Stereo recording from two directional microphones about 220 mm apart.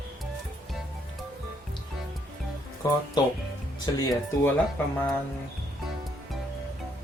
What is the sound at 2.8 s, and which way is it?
Speech, 15° left (ahead or behind).